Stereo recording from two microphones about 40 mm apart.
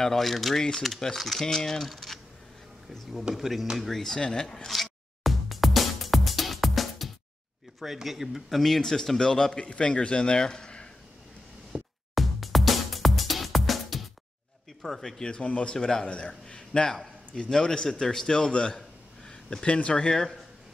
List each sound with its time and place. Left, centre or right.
0.0 s a man's voice: centre
3.3 s a man's voice: centre
3.8 s speech: centre
5.2 s music: centre
7.8 s a man's voice: centre
11.7 s music: right
12.2 s music: centre
14.8 s speech: centre
15.2 s a man's voice: left
18.5 s a sound: left
19.7 s a man's voice: left